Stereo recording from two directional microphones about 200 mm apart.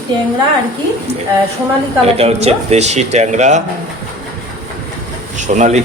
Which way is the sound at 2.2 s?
30° right (ahead or behind).